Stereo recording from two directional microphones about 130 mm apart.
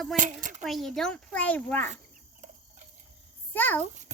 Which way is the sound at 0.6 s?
Centre (ahead or behind).